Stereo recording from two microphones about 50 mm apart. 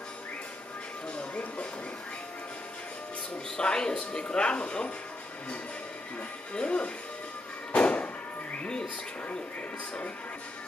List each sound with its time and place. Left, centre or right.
3.5 s speech: centre
6.5 s speech: left
7.7 s a sound: left